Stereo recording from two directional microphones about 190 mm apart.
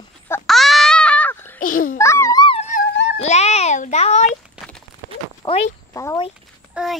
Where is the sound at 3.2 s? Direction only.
35° left (ahead or behind).